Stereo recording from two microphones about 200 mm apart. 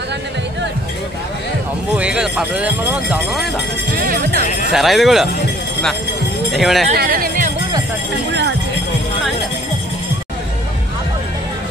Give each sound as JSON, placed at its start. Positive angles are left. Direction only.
{"t": 2.0, "sound": "speech", "side_deg": -5}
{"t": 4.0, "sound": "speech", "side_deg": -45}
{"t": 4.7, "sound": "speech", "side_deg": 0}
{"t": 6.5, "sound": "speech", "side_deg": 0}
{"t": 7.0, "sound": "speech", "side_deg": -45}